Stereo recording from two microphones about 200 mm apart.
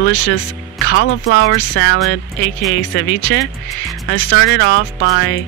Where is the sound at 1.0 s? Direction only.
65° left (ahead or behind).